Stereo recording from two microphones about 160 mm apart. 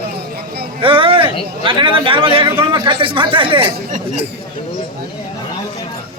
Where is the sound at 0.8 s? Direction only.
35° right (ahead or behind).